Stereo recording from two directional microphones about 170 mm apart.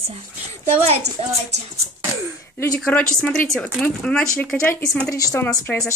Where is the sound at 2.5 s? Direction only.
10° left (ahead or behind).